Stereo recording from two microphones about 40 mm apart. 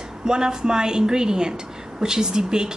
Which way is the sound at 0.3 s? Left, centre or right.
Centre.